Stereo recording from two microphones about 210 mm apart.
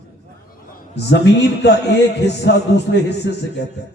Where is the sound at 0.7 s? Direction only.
55° left (ahead or behind).